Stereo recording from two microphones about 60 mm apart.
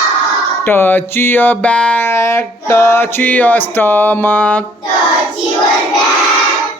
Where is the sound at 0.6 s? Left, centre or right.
Left.